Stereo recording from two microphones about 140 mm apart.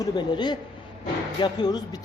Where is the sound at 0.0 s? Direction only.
30° left (ahead or behind).